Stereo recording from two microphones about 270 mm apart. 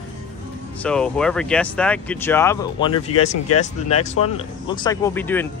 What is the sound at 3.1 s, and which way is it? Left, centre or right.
Speech, left.